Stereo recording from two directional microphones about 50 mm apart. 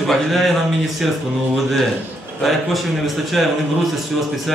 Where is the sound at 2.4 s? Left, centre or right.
Centre.